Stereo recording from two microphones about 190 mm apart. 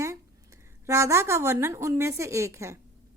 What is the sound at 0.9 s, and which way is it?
A woman's voice, 15° right (ahead or behind).